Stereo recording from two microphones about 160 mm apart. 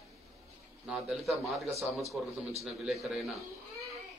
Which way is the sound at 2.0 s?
40° right (ahead or behind).